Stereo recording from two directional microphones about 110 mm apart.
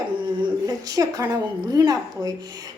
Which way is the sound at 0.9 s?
30° right (ahead or behind).